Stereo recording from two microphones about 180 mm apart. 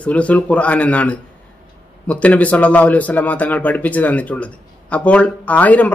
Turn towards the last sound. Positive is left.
turn(degrees=10)  # may be behind; listen again after turning